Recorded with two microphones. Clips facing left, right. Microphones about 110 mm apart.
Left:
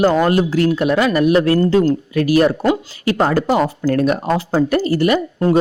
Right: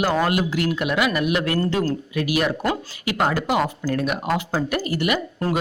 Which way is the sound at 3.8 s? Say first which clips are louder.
Left 7 dB; 55° left (ahead or behind).